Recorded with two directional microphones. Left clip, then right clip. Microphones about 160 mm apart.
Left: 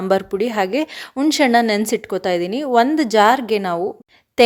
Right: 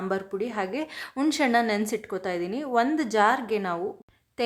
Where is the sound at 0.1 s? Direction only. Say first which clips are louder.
Left 14 dB; 45° left (ahead or behind); by 1.4 s 30° left (ahead or behind).